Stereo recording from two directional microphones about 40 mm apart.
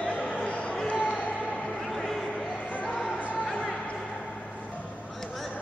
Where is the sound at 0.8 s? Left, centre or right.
Left.